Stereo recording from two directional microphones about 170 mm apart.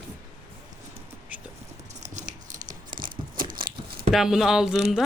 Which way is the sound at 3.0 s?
55° right (ahead or behind).